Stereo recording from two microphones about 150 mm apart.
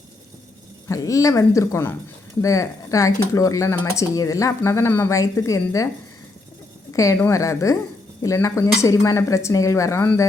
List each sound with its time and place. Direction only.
0.9 s speech: 20° left (ahead or behind)
6.9 s speech: 20° left (ahead or behind)